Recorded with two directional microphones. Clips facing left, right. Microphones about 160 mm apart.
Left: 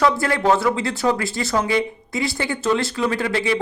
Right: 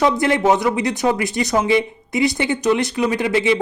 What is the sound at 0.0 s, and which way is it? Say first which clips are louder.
Speech: right 2 dB; 20° right (ahead or behind).